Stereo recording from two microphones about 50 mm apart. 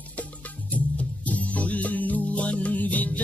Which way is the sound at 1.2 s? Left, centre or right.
Left.